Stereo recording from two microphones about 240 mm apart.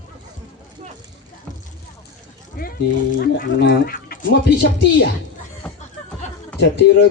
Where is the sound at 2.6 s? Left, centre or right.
Left.